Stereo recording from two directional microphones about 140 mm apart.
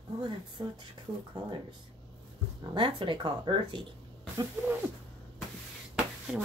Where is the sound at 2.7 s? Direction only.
35° right (ahead or behind).